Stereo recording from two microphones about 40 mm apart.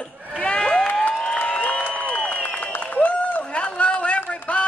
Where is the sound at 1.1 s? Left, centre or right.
Left.